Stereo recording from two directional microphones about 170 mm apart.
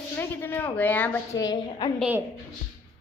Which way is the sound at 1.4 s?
25° left (ahead or behind).